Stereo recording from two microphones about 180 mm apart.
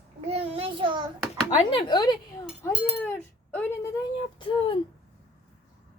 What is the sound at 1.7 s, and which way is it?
Speech, 25° left (ahead or behind).